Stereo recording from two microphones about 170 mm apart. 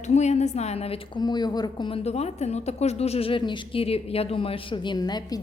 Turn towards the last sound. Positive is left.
turn(degrees=25)  # may be behind; listen again after turning